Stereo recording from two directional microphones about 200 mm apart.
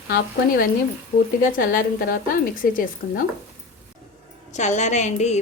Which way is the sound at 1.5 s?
45° left (ahead or behind).